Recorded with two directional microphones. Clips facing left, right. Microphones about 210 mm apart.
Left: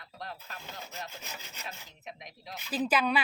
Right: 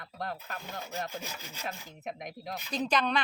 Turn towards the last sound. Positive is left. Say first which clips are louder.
# left 1 dB
turn(degrees=5)  # may be behind; listen again after turning